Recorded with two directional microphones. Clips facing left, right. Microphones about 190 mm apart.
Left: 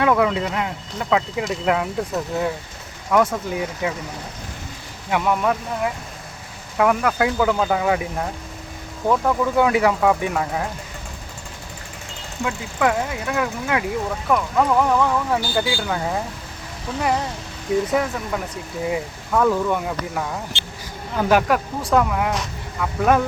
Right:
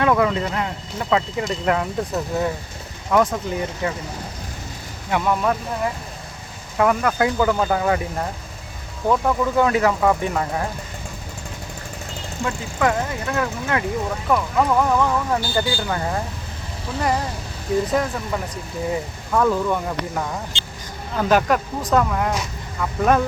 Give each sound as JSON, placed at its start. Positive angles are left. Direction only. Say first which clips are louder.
{"t": 0.0, "sound": "speech", "louder": "even", "side_deg": 5}
{"t": 5.1, "sound": "speech", "louder": "even", "side_deg": 5}
{"t": 12.5, "sound": "speech", "louder": "even", "side_deg": 5}
{"t": 17.9, "sound": "speech", "louder": "even", "side_deg": 5}
{"t": 20.5, "sound": "a sound", "louder": "left 1 dB", "side_deg": -15}
{"t": 21.2, "sound": "speech", "louder": "even", "side_deg": 10}